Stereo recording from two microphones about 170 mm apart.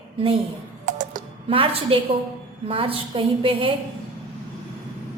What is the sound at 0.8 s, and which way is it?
Typing, 50° right (ahead or behind).